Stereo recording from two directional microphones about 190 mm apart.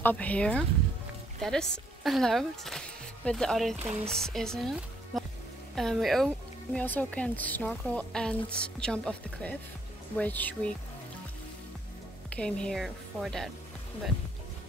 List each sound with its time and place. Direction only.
0.0 s a woman's voice: 10° left (ahead or behind)
12.4 s a woman's voice: 5° left (ahead or behind)